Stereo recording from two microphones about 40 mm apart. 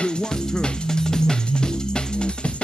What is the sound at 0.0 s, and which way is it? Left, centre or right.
Music, left.